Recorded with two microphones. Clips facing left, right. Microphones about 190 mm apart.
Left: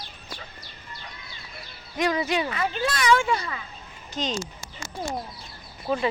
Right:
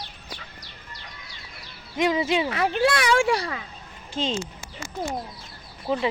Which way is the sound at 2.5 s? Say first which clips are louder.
Right 5 dB; 65° right (ahead or behind).